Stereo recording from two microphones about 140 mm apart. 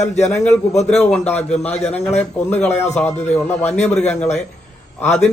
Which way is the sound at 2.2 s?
10° left (ahead or behind).